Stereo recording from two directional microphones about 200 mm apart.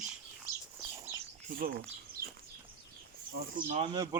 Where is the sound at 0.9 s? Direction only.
15° right (ahead or behind).